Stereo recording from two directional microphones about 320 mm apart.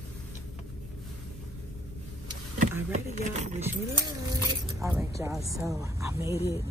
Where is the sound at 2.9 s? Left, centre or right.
Right.